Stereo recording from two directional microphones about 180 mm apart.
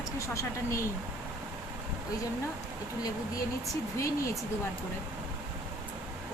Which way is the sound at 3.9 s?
15° left (ahead or behind).